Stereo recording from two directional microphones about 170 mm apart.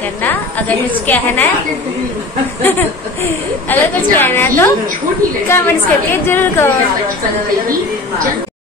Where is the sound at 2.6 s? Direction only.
10° left (ahead or behind).